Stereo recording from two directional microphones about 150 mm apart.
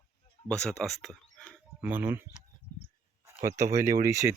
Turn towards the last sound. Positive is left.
turn(degrees=-20)  # may be behind; listen again after turning